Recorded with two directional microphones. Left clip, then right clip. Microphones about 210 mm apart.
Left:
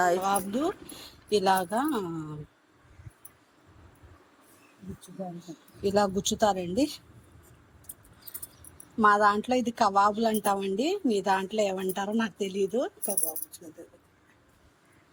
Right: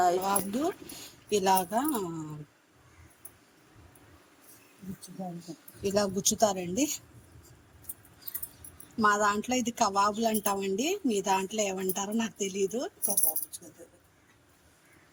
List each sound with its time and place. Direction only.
0.2 s a woman's voice: 10° left (ahead or behind)
5.5 s speech: 20° right (ahead or behind)
5.8 s a woman's voice: 10° left (ahead or behind)
9.0 s a woman's voice: 10° left (ahead or behind)